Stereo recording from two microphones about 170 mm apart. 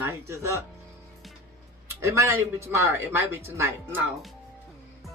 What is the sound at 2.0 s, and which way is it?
Speech, 15° right (ahead or behind).